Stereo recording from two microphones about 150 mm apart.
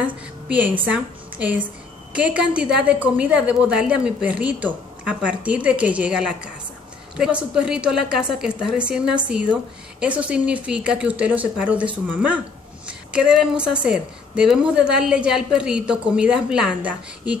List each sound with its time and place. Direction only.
0.0 s a woman's voice: 10° right (ahead or behind)